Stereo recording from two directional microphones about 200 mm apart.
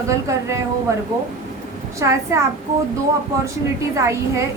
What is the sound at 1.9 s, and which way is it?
Speech, 15° right (ahead or behind).